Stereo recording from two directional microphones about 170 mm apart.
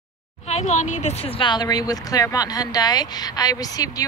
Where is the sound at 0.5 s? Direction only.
45° left (ahead or behind).